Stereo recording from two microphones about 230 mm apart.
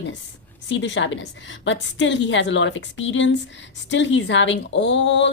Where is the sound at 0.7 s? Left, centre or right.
Left.